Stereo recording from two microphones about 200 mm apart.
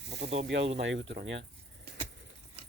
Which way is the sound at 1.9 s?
55° right (ahead or behind).